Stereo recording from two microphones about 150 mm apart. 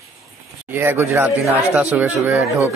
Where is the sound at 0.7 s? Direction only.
15° right (ahead or behind).